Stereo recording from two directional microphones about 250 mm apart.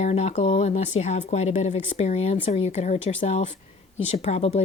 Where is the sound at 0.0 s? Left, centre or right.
Left.